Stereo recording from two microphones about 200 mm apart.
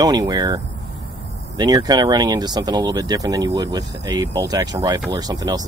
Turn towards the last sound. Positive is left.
turn(degrees=-20)  # may be behind; listen again after turning